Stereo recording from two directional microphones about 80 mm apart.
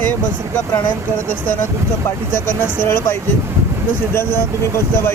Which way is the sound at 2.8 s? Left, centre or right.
Left.